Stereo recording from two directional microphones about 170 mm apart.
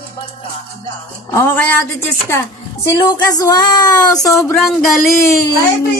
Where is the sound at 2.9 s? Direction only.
20° left (ahead or behind).